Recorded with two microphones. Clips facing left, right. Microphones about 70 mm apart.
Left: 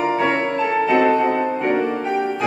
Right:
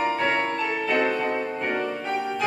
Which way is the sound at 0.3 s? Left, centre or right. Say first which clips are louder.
Left 5 dB; left.